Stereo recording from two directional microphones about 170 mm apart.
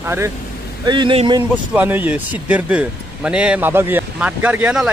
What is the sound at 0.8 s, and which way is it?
Speech, 25° right (ahead or behind).